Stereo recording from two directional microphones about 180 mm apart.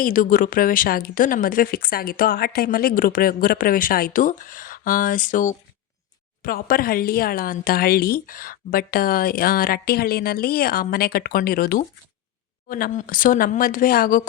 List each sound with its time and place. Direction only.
0.0 s speech: 50° left (ahead or behind)